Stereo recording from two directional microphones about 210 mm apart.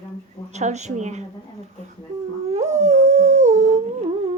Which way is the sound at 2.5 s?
35° right (ahead or behind).